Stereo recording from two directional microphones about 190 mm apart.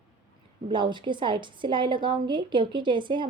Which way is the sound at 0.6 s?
25° right (ahead or behind).